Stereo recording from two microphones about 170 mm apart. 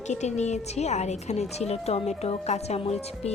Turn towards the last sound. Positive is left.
turn(degrees=40)  # may be behind; listen again after turning